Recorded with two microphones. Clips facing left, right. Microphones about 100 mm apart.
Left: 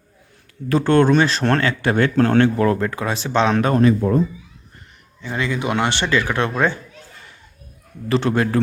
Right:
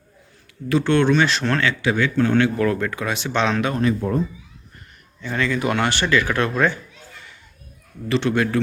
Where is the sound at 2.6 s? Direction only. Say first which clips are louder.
Left 2 dB; 30° left (ahead or behind).